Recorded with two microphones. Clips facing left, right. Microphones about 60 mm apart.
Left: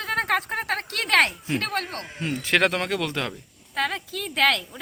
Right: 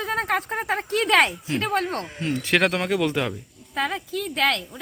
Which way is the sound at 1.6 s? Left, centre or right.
Right.